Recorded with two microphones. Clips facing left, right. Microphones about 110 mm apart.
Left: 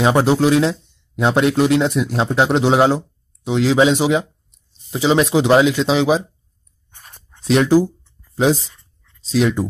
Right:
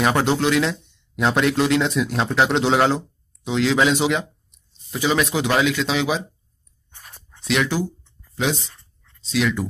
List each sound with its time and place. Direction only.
0.0 s speech: 20° left (ahead or behind)
7.4 s speech: 35° left (ahead or behind)